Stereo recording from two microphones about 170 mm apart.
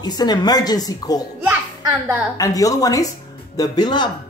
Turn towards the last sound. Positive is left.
turn(degrees=25)  # may be behind; listen again after turning